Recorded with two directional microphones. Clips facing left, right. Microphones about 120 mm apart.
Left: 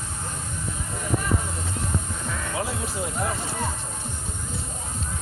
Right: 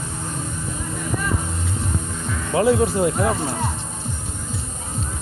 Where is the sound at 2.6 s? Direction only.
60° right (ahead or behind).